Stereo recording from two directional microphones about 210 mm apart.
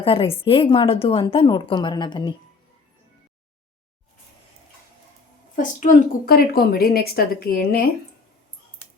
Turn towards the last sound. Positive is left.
turn(degrees=45)  # may be behind; listen again after turning